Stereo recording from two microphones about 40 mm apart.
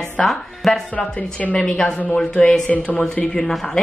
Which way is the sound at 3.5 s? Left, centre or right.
Centre.